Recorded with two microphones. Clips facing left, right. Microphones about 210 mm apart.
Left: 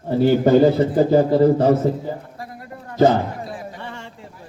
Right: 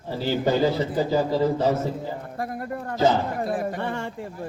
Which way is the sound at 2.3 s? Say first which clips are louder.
Right 6 dB; 55° right (ahead or behind).